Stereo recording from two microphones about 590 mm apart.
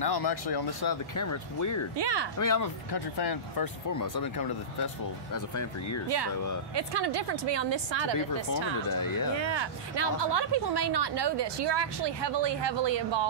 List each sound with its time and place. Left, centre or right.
0.0 s speech: left
2.0 s speech: right
2.3 s speech: left
6.0 s speech: right
8.9 s speech: left
9.4 s speech: right